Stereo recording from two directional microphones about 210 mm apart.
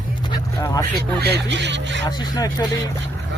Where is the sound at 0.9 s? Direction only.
50° right (ahead or behind).